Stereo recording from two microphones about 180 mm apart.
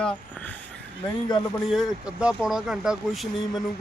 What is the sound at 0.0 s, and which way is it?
Speech, 10° left (ahead or behind).